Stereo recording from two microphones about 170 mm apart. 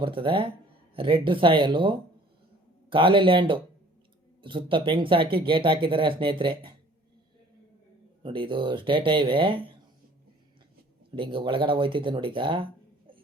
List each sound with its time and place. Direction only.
0.0 s speech: 30° right (ahead or behind)
8.2 s speech: 30° right (ahead or behind)
11.1 s speech: 30° right (ahead or behind)